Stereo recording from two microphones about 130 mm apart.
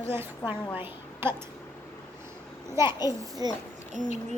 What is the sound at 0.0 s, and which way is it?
A woman's voice, 20° right (ahead or behind).